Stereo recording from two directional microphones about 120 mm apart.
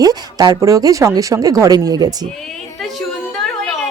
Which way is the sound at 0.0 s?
30° right (ahead or behind).